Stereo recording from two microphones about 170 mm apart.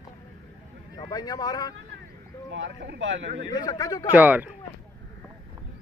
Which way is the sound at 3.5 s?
25° left (ahead or behind).